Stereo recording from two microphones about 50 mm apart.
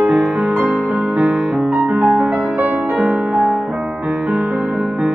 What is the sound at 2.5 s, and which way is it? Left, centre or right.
Music, right.